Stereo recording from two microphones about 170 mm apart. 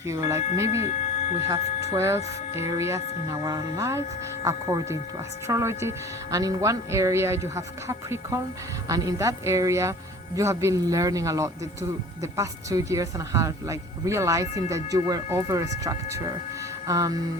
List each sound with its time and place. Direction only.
0.1 s speech: 15° right (ahead or behind)
0.8 s speech: 40° left (ahead or behind)
1.5 s speech: 20° right (ahead or behind)